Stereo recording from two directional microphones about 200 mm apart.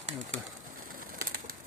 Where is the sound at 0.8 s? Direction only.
45° right (ahead or behind).